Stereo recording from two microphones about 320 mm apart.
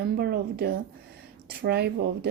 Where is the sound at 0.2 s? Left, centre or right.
Right.